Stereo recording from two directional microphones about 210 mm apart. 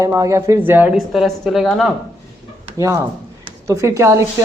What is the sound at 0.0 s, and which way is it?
Speech, 15° right (ahead or behind).